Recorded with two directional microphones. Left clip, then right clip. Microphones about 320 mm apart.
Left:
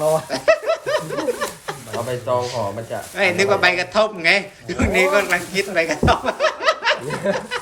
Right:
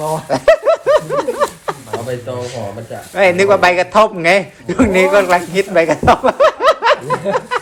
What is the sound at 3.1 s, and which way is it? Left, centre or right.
A man's voice, centre.